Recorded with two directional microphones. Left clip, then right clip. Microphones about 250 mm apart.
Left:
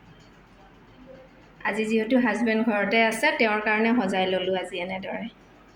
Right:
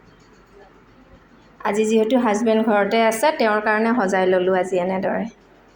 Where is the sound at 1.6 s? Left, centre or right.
Centre.